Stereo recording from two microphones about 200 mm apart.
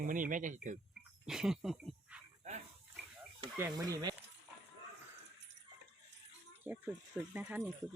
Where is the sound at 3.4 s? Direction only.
15° right (ahead or behind).